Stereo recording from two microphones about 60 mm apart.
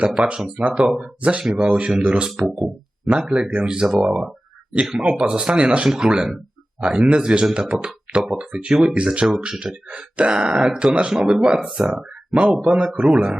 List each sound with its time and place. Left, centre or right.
0.3 s speech: centre
1.2 s speech: right
2.3 s speech: centre
3.1 s speech: centre